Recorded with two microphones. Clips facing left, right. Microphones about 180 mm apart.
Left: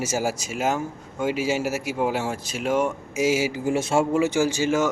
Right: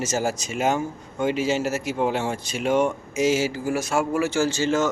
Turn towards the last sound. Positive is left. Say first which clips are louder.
# even
turn(degrees=10)  # may be behind; listen again after turning